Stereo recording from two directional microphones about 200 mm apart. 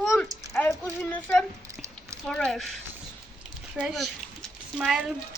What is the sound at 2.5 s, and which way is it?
Speech, centre (ahead or behind).